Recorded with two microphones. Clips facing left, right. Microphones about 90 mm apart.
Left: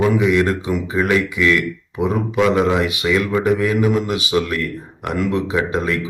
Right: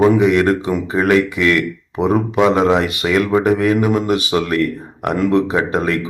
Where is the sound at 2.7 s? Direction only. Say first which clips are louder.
Right 2 dB; 50° right (ahead or behind).